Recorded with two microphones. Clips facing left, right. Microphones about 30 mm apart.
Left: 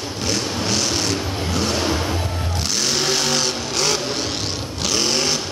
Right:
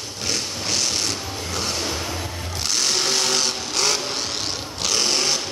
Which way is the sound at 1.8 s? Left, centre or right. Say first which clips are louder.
Left 5 dB; left.